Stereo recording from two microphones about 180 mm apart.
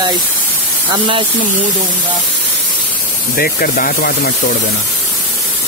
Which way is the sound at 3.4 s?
55° left (ahead or behind).